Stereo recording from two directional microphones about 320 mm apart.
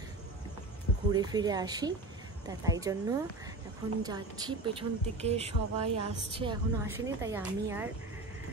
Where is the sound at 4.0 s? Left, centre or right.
Centre.